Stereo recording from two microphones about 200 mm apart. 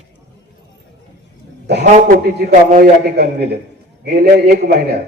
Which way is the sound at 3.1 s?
55° right (ahead or behind).